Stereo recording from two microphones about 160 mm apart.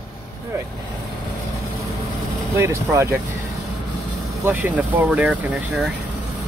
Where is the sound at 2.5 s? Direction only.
15° right (ahead or behind).